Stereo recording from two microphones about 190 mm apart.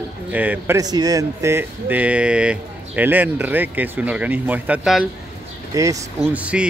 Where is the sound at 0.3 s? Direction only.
10° right (ahead or behind).